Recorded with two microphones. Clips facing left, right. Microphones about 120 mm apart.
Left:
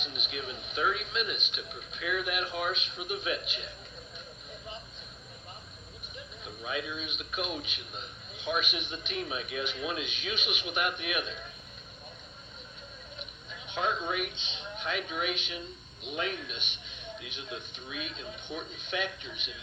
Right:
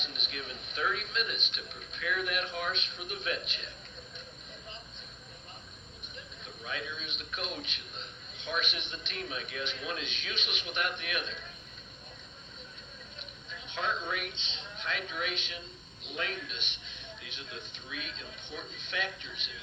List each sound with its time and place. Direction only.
0.0 s a man's voice: 5° left (ahead or behind)
6.4 s a man's voice: 10° left (ahead or behind)
13.7 s a man's voice: 15° left (ahead or behind)